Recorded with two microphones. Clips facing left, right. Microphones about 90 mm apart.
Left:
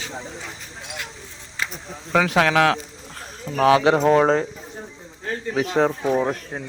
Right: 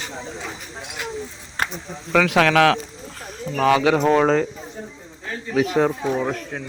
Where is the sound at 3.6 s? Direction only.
45° left (ahead or behind).